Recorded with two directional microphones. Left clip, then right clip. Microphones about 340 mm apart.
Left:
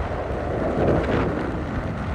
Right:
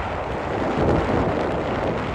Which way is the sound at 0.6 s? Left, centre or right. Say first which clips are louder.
Even; left.